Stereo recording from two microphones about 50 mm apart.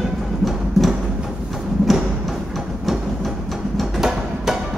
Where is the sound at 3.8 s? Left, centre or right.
Centre.